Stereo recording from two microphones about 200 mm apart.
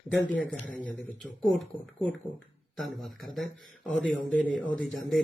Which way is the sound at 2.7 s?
Centre (ahead or behind).